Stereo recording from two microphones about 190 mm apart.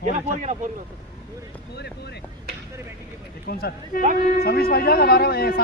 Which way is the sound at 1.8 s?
60° left (ahead or behind).